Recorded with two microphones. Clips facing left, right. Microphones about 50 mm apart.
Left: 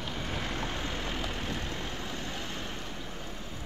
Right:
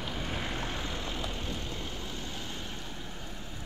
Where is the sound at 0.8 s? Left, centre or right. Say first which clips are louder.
Left 2 dB; left.